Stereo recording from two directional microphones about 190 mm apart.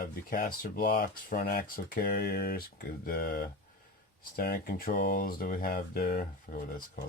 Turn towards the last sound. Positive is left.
turn(degrees=45)  # may be behind; listen again after turning